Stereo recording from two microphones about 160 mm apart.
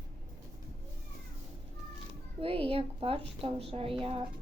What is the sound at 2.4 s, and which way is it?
A woman's voice, 35° right (ahead or behind).